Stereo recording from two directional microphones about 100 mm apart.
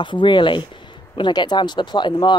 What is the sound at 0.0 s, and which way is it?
Speech, 55° left (ahead or behind).